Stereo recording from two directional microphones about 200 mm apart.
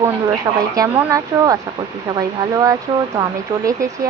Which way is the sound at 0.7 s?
15° right (ahead or behind).